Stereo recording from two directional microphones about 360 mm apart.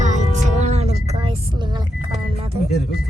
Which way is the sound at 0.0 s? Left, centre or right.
Centre.